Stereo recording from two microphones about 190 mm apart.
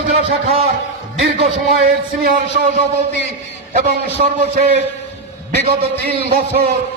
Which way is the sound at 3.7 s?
45° right (ahead or behind).